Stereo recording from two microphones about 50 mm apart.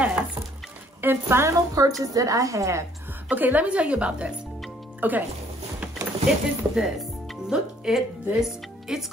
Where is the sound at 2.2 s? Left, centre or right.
Right.